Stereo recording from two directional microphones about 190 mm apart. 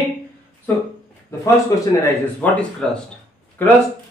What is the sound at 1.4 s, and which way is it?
Speech, 15° left (ahead or behind).